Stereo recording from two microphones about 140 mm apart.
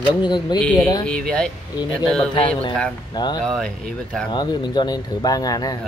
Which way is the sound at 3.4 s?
5° left (ahead or behind).